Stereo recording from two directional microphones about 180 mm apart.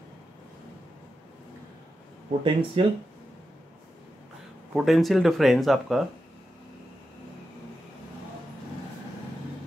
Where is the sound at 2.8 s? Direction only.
30° right (ahead or behind).